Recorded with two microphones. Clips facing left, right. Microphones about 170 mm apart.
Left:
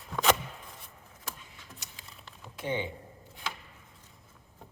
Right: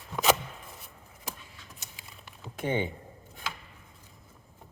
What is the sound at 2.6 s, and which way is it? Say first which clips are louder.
Speech: right 3 dB; 55° right (ahead or behind).